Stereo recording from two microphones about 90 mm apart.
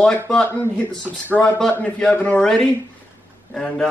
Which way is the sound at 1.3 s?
10° left (ahead or behind).